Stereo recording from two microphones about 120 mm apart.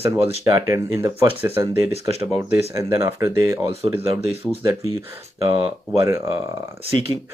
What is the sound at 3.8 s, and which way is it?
Speech, 55° right (ahead or behind).